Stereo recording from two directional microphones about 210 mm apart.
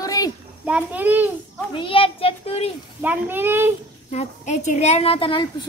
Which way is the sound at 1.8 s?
25° left (ahead or behind).